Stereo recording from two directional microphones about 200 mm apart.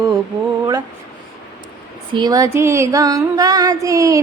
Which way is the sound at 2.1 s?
20° right (ahead or behind).